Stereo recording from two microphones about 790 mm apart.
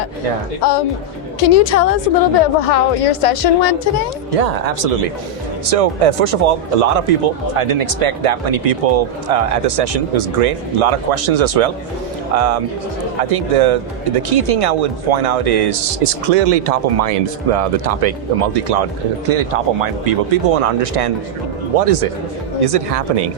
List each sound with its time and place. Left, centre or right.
0.6 s a woman's voice: left
4.3 s speech: right